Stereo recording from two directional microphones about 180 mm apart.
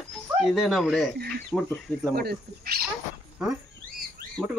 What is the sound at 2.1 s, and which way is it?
Speech, 60° right (ahead or behind).